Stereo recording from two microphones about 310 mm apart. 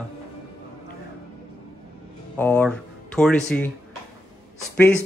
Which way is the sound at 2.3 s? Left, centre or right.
Centre.